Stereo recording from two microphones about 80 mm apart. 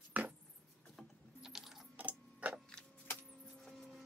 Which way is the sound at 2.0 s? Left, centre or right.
Centre.